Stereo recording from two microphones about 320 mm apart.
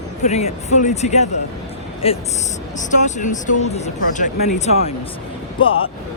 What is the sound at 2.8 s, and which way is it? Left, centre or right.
Speech, left.